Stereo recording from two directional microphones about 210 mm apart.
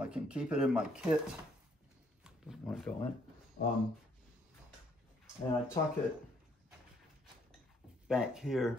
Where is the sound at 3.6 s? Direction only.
45° left (ahead or behind).